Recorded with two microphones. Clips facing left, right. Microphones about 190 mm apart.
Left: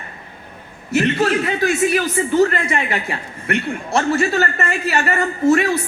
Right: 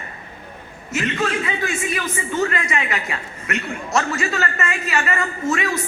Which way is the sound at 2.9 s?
30° left (ahead or behind).